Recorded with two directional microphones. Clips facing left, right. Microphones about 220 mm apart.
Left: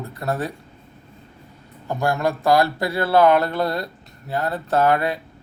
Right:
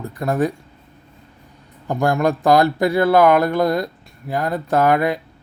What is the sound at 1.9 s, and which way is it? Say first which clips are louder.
Speech: right 4 dB; 15° right (ahead or behind).